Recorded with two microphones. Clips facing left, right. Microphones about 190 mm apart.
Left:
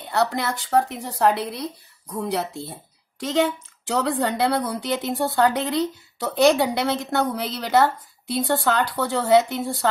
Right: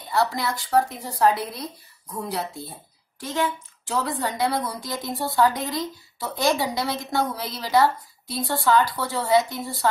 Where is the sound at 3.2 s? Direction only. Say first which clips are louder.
Left 5 dB; 80° left.